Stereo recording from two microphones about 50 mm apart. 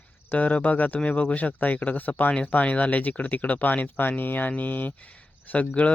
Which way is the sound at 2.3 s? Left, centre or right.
Left.